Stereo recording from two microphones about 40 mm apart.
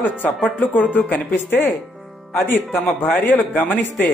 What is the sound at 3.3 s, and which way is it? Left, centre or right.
Speech, left.